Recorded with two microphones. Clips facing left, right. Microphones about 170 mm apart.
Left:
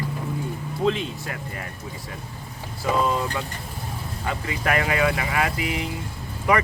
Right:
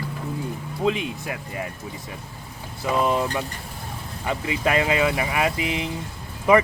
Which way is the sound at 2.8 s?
20° right (ahead or behind).